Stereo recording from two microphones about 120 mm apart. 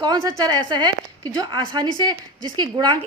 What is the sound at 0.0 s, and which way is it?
A woman's voice, 35° right (ahead or behind).